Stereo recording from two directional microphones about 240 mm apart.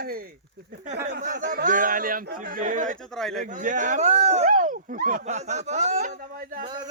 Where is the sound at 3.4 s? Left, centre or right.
Right.